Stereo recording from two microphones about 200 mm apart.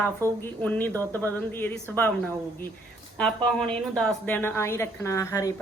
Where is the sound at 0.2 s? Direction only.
15° right (ahead or behind).